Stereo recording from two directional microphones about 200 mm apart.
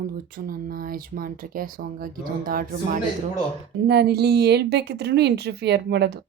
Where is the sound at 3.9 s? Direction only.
55° right (ahead or behind).